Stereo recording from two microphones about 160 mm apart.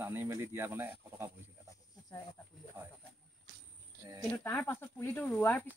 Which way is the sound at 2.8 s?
15° right (ahead or behind).